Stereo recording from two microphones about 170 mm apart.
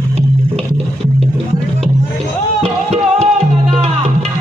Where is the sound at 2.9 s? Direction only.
40° right (ahead or behind).